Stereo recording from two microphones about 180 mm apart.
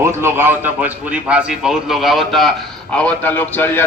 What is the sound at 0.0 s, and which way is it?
A man's voice, 15° right (ahead or behind).